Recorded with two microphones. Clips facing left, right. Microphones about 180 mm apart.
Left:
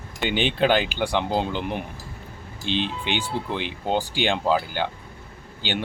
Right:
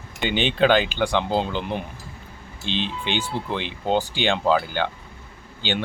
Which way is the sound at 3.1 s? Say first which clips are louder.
Right 1 dB; 10° left (ahead or behind).